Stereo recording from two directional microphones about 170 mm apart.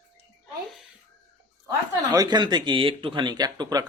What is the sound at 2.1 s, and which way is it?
Speech, 25° right (ahead or behind).